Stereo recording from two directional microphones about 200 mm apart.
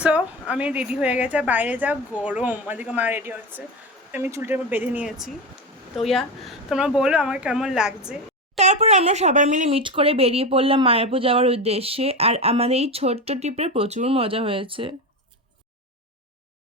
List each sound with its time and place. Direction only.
0.0 s a woman's voice: 5° right (ahead or behind)
8.5 s speech: 35° right (ahead or behind)